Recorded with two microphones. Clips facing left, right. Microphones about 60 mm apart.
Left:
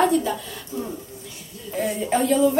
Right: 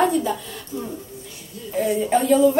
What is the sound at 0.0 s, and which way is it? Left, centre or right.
Speech, centre.